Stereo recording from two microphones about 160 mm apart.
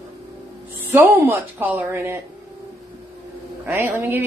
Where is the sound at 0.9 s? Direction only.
15° right (ahead or behind).